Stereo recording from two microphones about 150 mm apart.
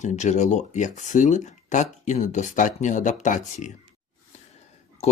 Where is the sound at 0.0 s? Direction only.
55° left (ahead or behind).